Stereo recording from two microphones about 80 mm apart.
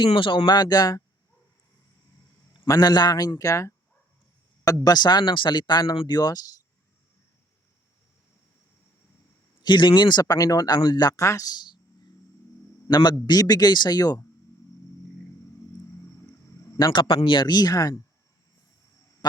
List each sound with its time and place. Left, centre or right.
0.0 s speech: left
2.6 s a man's voice: left
9.6 s speech: left
10.3 s speech: left
11.2 s speech: left
12.9 s speech: left
16.9 s speech: left
19.2 s a sound: left